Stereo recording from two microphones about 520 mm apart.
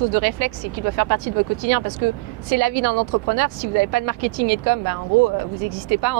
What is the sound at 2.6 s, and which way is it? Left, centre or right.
Speech, right.